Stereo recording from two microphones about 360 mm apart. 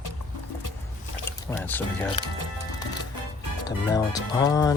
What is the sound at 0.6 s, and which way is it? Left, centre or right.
Music, left.